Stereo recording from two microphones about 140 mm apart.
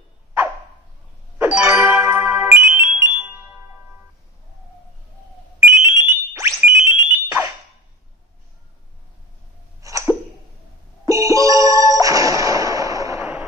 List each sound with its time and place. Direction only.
1.4 s music: 15° right (ahead or behind)
5.6 s a sound: 20° right (ahead or behind)
9.8 s hiccup: 25° right (ahead or behind)
11.1 s music: 25° right (ahead or behind)
13.2 s music: 10° right (ahead or behind)